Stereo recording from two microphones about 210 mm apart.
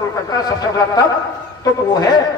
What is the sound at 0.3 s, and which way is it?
A man's voice, 20° left (ahead or behind).